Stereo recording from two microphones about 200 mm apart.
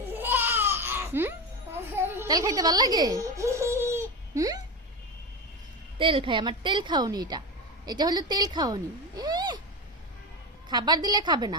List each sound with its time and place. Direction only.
0.2 s a sound: 10° right (ahead or behind)
2.0 s speech: 15° right (ahead or behind)
6.0 s a woman's voice: 25° right (ahead or behind)
10.7 s a woman's voice: 20° right (ahead or behind)